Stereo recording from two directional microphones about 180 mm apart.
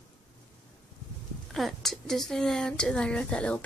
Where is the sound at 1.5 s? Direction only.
Centre (ahead or behind).